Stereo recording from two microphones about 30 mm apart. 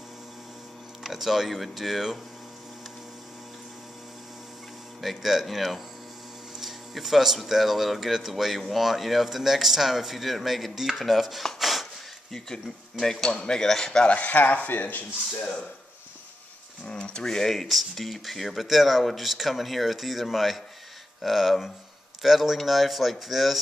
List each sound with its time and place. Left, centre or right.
1.0 s speech: centre
5.2 s speech: centre
6.6 s a sound: centre
7.4 s speech: centre
11.6 s wood: centre
12.3 s speech: centre
14.0 s speech: left
14.7 s speech: left
16.8 s speech: left
17.3 s speech: centre
17.6 s speech: centre